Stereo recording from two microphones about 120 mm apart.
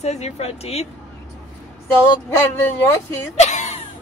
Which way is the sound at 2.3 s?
20° left (ahead or behind).